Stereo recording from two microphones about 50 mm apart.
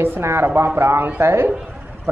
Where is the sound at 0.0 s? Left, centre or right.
Right.